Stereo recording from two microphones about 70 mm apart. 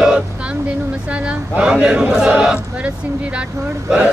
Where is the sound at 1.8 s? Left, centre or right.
Centre.